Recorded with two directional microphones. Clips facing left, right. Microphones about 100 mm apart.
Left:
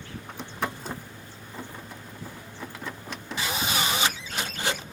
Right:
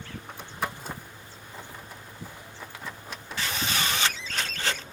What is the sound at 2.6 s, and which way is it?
Vehicle, 5° right (ahead or behind).